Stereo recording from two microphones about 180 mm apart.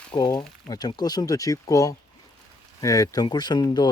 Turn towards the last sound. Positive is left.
turn(degrees=25)  # may be behind; listen again after turning